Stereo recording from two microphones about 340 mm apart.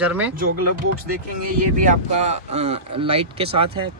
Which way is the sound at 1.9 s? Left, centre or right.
Centre.